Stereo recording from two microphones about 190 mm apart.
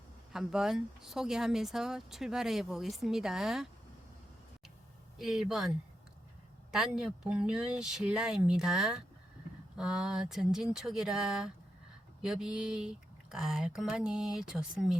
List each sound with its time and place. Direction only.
0.3 s speech: 5° right (ahead or behind)
5.1 s speech: centre (ahead or behind)
6.7 s speech: 5° right (ahead or behind)